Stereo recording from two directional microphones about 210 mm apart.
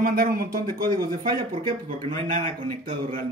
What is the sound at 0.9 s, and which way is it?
Speech, 20° right (ahead or behind).